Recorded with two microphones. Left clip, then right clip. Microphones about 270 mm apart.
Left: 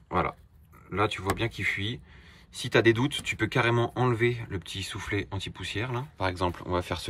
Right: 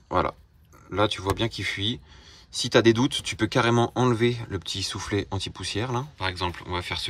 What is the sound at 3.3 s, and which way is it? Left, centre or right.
Speech, centre.